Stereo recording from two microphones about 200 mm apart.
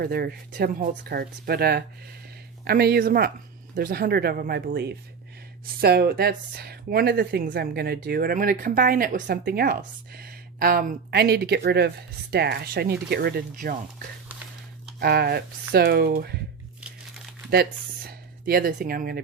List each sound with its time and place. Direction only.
0.0 s speech: 50° right (ahead or behind)
14.9 s speech: 50° right (ahead or behind)
17.5 s speech: 50° right (ahead or behind)